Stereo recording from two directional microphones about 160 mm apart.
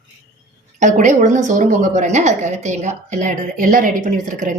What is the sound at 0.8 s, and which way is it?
A woman's voice, 50° right (ahead or behind).